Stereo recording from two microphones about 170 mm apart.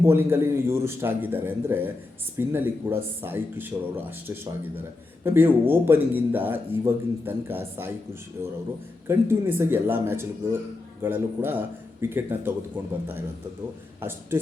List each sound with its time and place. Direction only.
0.0 s speech: 15° right (ahead or behind)
5.2 s speech: 15° right (ahead or behind)
9.0 s speech: 15° right (ahead or behind)